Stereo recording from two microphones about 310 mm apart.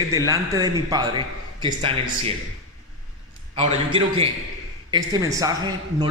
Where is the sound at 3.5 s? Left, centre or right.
Centre.